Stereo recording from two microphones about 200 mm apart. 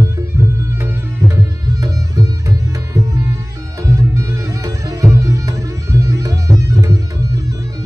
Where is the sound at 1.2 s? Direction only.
15° right (ahead or behind).